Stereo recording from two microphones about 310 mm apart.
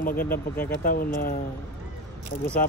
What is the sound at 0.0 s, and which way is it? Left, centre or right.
Speech, left.